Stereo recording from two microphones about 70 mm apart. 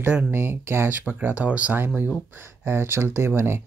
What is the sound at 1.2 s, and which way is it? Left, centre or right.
Speech, right.